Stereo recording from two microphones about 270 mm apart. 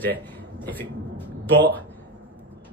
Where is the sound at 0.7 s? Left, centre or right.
Centre.